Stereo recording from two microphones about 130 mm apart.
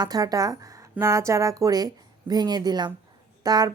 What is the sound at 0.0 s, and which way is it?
A woman's voice, 30° right (ahead or behind).